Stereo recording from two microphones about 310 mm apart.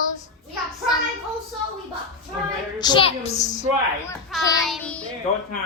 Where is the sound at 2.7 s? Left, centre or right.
Centre.